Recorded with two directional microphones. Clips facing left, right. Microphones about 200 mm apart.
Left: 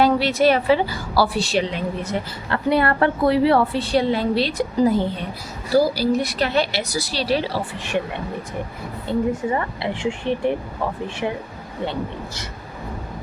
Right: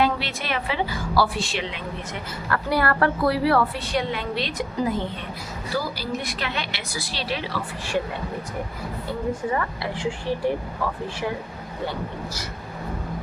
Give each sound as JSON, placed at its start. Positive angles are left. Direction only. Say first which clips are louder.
{"t": 0.0, "sound": "a woman's voice", "louder": "left 8 dB", "side_deg": 40}
{"t": 2.5, "sound": "a woman's voice", "louder": "left 4 dB", "side_deg": 25}
{"t": 9.0, "sound": "speech", "louder": "left 5 dB", "side_deg": 25}
{"t": 11.9, "sound": "speech", "louder": "left 4 dB", "side_deg": 25}